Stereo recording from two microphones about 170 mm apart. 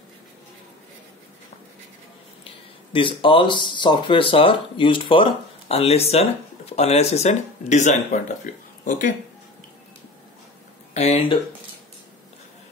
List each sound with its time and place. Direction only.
2.9 s speech: 30° left (ahead or behind); by 9.1 s 50° left (ahead or behind)
10.9 s speech: 40° left (ahead or behind)